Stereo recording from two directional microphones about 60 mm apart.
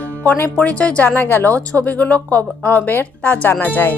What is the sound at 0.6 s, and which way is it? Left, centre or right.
Speech, centre.